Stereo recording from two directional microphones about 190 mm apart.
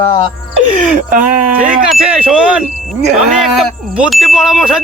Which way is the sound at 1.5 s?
5° right (ahead or behind).